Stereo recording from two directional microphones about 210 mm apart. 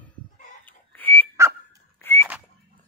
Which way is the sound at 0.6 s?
10° left (ahead or behind).